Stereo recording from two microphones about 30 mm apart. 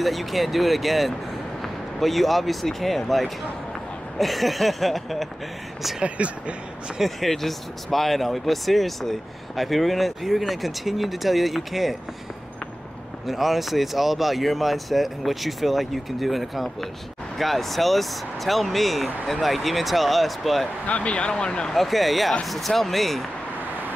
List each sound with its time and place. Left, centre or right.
0.0 s speech: centre
4.2 s speech: centre
6.0 s speech: right
7.2 s speech: centre
13.3 s speech: centre
20.8 s speech: left
21.6 s speech: centre